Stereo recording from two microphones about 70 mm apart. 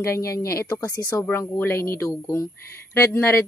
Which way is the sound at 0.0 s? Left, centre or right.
Left.